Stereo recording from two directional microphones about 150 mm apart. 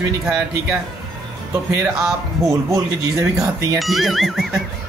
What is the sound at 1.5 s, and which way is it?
Speech, 20° right (ahead or behind).